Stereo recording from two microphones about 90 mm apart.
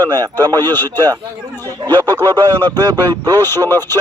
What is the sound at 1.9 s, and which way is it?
Speech, 20° left (ahead or behind).